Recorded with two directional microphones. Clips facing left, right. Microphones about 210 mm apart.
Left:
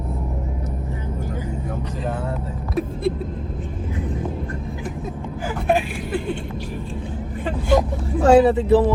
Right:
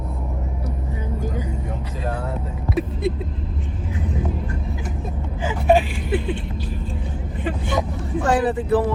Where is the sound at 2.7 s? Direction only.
Centre (ahead or behind).